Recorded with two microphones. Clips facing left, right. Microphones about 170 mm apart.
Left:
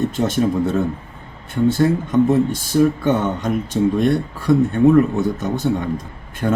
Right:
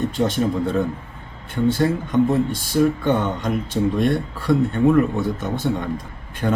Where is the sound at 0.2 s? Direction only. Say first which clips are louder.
Left 2 dB; 45° left (ahead or behind).